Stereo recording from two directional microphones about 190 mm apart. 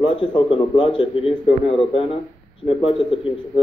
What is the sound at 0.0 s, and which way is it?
A man's voice, 25° left (ahead or behind).